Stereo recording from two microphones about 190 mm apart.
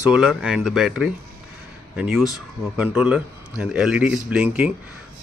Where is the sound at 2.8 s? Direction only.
5° right (ahead or behind).